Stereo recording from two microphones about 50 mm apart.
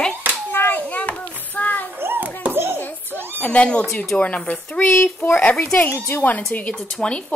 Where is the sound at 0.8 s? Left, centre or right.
Left.